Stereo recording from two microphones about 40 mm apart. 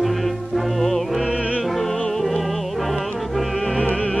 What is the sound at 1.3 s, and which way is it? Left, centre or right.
Music, left.